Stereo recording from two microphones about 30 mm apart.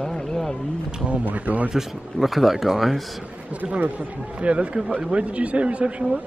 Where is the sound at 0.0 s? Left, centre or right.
Left.